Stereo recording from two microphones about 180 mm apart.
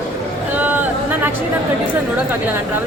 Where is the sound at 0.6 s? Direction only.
10° right (ahead or behind).